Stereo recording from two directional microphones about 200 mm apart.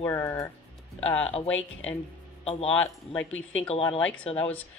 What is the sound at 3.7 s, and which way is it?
Speech, 30° left (ahead or behind).